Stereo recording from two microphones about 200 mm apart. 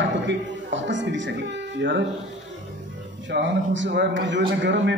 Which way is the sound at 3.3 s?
65° right (ahead or behind).